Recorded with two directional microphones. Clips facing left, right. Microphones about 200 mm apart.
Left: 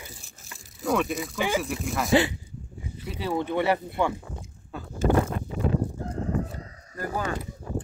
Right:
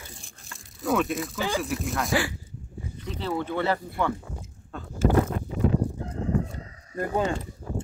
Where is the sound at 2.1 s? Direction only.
20° left (ahead or behind).